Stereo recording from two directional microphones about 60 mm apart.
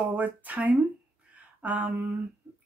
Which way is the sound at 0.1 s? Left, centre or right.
Right.